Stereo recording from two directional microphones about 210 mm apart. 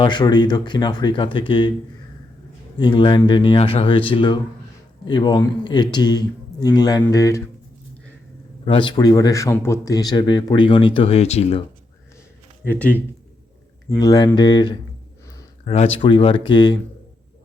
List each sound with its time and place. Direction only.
0.0 s speech: 20° left (ahead or behind)
2.7 s speech: 20° left (ahead or behind)
8.6 s speech: 25° left (ahead or behind)
12.6 s speech: 10° left (ahead or behind)
15.3 s a sound: 15° left (ahead or behind)
15.7 s speech: 30° left (ahead or behind)